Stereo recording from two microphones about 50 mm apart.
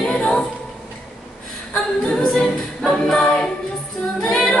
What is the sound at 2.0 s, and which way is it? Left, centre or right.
A capella, centre.